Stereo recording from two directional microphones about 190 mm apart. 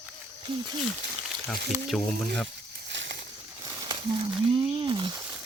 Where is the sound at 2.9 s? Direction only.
70° right (ahead or behind).